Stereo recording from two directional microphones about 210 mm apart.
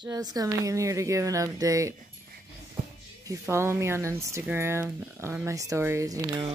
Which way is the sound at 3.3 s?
15° right (ahead or behind).